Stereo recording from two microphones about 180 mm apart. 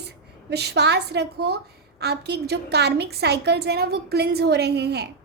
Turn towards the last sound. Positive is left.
turn(degrees=-65)  # may be behind; listen again after turning